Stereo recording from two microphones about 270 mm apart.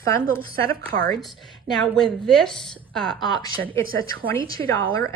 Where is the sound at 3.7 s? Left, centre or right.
Centre.